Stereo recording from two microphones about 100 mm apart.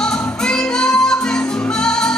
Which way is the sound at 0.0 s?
5° left (ahead or behind).